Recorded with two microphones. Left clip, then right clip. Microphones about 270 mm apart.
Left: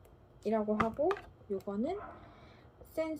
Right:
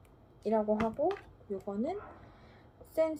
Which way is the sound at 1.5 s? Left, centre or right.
Centre.